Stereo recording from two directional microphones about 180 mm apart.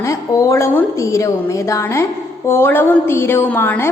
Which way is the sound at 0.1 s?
15° left (ahead or behind).